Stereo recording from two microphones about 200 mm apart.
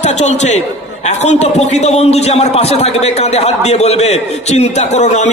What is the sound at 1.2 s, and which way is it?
A man's voice, 35° left (ahead or behind).